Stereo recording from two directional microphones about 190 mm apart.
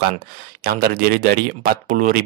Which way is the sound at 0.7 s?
50° right (ahead or behind).